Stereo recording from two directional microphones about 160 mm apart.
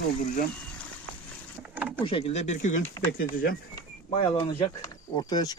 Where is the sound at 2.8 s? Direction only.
15° left (ahead or behind).